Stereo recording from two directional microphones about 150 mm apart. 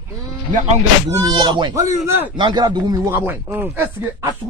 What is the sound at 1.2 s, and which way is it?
Speech, 25° right (ahead or behind).